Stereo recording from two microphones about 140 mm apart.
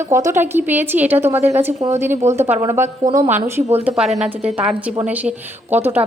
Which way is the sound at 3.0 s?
30° right (ahead or behind).